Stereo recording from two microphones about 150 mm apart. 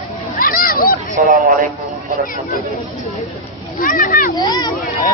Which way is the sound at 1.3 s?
60° right (ahead or behind).